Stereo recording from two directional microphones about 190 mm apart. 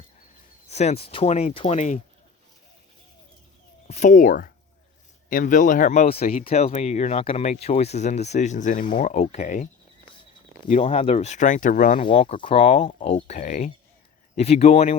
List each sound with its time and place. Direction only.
0.7 s speech: 35° left (ahead or behind)
3.8 s speech: 40° left (ahead or behind)
10.7 s speech: 35° left (ahead or behind)
11.9 s speech: 30° left (ahead or behind)